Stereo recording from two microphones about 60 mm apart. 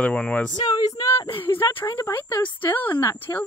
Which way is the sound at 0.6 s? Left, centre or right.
Left.